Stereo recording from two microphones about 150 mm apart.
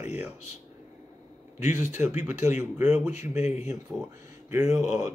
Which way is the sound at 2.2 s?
15° right (ahead or behind).